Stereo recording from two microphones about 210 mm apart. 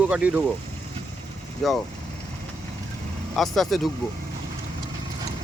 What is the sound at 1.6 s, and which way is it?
Speech, centre (ahead or behind).